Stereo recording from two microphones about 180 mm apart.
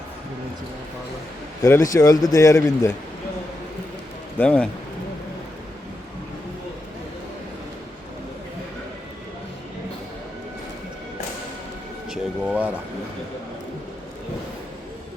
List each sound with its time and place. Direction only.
1.6 s a man's voice: 15° left (ahead or behind)
4.4 s a man's voice: 5° left (ahead or behind)
12.1 s speech: 5° right (ahead or behind)